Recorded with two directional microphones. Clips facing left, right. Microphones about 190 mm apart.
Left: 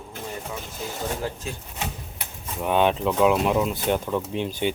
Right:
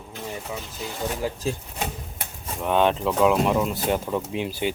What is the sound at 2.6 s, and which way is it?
Speech, 5° left (ahead or behind).